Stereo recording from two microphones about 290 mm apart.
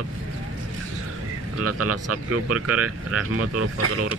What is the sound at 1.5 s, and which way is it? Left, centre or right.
Speech, right.